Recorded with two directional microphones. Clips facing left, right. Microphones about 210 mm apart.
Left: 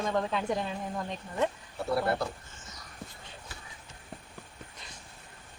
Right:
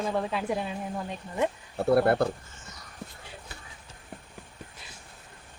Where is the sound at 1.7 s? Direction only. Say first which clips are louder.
Right 11 dB; 55° right (ahead or behind).